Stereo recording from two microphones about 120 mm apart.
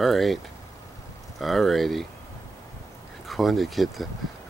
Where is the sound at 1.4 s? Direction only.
Centre (ahead or behind).